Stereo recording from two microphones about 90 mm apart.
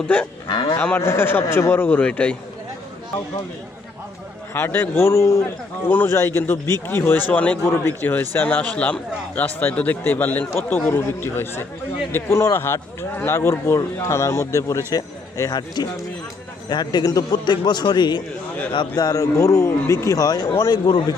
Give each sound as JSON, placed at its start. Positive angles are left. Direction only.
{"t": 0.4, "sound": "cattle", "side_deg": 60}
{"t": 0.9, "sound": "a man's voice", "side_deg": 25}
{"t": 4.5, "sound": "a man's voice", "side_deg": 25}
{"t": 5.9, "sound": "a man's voice", "side_deg": 20}
{"t": 12.1, "sound": "speech", "side_deg": 30}
{"t": 14.9, "sound": "speech", "side_deg": 45}
{"t": 18.9, "sound": "speech", "side_deg": 40}